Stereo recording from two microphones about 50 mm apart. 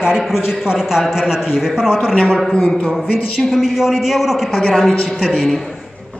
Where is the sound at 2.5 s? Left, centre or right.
Centre.